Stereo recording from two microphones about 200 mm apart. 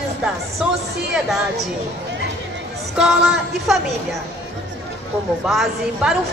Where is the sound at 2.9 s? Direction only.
Centre (ahead or behind).